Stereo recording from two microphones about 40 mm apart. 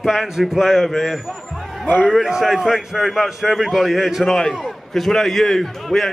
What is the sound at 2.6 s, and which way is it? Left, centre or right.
A man's voice, centre.